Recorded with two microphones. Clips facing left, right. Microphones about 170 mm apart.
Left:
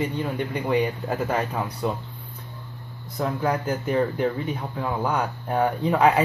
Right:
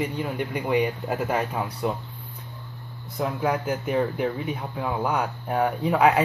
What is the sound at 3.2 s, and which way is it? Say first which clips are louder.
Speech: left 1 dB; 5° right (ahead or behind).